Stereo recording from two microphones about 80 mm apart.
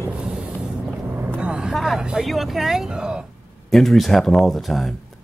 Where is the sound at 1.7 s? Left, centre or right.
Centre.